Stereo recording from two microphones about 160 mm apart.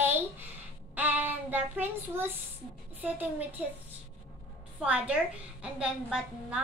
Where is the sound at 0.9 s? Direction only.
10° right (ahead or behind).